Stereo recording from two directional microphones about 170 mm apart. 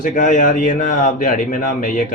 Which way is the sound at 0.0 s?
50° left (ahead or behind).